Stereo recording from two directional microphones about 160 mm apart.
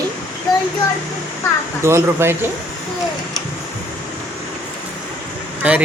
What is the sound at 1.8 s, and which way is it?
Speech, 15° right (ahead or behind).